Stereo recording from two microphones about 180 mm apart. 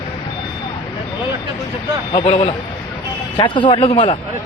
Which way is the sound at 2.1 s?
30° left (ahead or behind).